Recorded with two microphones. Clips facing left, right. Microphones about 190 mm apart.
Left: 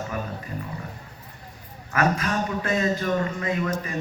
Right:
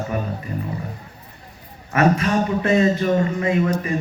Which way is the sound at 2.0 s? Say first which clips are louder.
Right 6 dB; 25° right (ahead or behind).